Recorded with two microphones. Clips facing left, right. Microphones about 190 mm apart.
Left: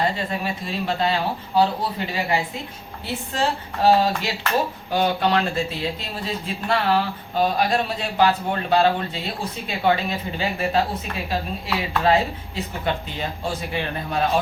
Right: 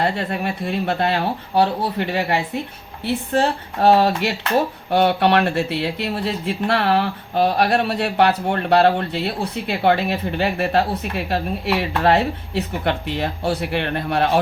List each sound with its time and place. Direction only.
0.0 s speech: 65° right (ahead or behind)